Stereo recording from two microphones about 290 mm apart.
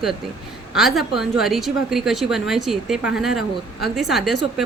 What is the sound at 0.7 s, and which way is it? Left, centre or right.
A woman's voice, centre.